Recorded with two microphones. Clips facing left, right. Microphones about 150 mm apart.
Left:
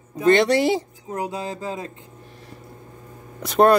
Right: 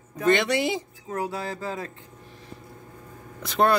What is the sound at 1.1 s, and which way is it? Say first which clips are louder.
Speech: left 1 dB; 20° left (ahead or behind).